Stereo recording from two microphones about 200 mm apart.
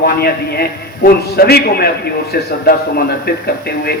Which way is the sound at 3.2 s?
50° left (ahead or behind).